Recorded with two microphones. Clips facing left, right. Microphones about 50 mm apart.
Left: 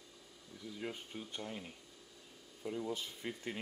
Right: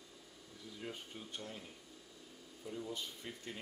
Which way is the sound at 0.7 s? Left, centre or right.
Left.